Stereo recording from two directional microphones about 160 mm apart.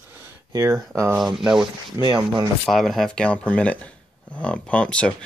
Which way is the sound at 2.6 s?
Centre (ahead or behind).